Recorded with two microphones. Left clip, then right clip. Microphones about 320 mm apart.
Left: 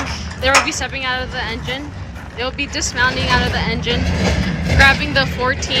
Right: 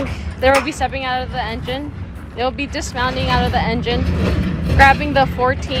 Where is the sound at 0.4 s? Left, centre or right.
Right.